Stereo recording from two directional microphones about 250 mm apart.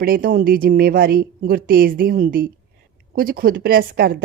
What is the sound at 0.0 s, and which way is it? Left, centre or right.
A woman's voice, right.